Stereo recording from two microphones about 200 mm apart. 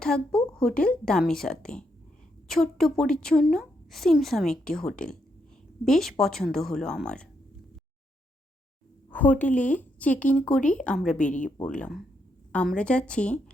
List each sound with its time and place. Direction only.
0.0 s a woman's voice: 5° left (ahead or behind)
9.0 s a woman's voice: 10° left (ahead or behind)
11.3 s speech: 40° left (ahead or behind)
11.6 s a woman's voice: 5° left (ahead or behind)